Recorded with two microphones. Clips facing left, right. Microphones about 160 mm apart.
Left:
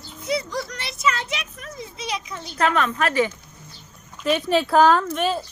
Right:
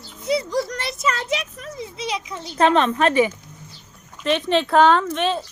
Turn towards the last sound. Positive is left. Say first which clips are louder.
# right 1 dB
turn(degrees=5)  # may be behind; listen again after turning